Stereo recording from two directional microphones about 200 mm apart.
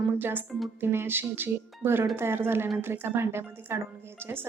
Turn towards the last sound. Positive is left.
turn(degrees=-10)  # may be behind; listen again after turning